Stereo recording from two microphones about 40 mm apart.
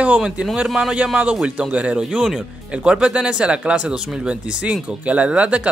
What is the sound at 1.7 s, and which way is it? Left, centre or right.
Speech, right.